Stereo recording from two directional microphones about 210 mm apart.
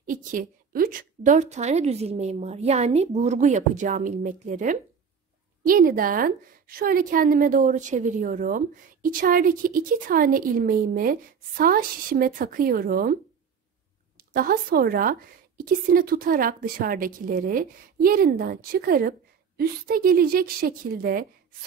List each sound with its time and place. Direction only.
0.0 s a woman's voice: 40° right (ahead or behind)
5.8 s a woman's voice: 40° right (ahead or behind)
14.3 s a woman's voice: 40° right (ahead or behind)